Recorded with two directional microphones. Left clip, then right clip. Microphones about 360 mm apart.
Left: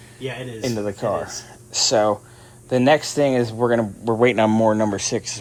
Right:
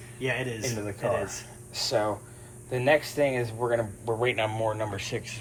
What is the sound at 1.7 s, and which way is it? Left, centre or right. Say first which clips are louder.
Speech: left 9 dB; left.